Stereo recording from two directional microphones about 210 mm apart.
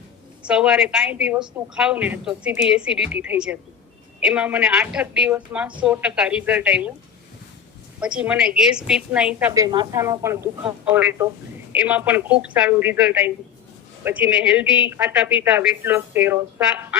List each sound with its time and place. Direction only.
0.4 s a woman's voice: 5° right (ahead or behind)
8.0 s a woman's voice: 5° right (ahead or behind)
9.5 s speech: 20° right (ahead or behind)